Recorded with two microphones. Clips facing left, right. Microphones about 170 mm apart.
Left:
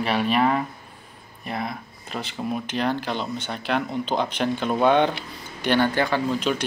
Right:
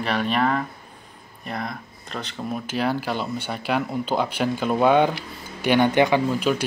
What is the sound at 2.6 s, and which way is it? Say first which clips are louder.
Speech: right 3 dB; 5° right (ahead or behind).